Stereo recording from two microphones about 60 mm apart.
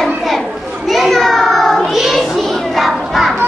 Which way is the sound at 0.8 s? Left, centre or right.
Centre.